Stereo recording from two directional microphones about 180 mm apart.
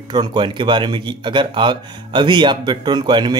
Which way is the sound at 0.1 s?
25° right (ahead or behind).